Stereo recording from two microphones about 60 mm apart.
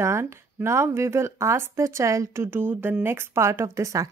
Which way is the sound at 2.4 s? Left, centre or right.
Right.